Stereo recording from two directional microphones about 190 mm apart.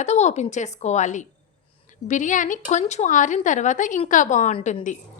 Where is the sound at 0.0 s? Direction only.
35° left (ahead or behind).